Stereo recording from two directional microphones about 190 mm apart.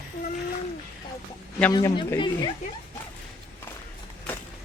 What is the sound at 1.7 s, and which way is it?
Speech, 20° left (ahead or behind).